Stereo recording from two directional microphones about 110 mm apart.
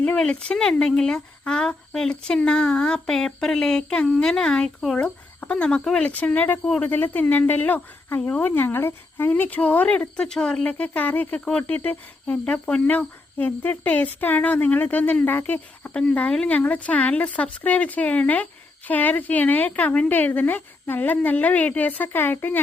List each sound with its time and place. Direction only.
0.0 s speech: 10° left (ahead or behind)